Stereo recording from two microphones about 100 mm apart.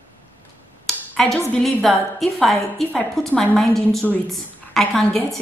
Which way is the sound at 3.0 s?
15° left (ahead or behind).